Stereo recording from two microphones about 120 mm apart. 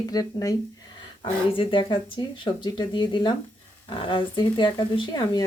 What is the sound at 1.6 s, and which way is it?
Speech, 45° left (ahead or behind).